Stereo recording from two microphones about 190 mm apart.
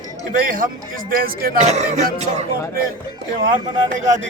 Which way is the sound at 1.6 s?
35° right (ahead or behind).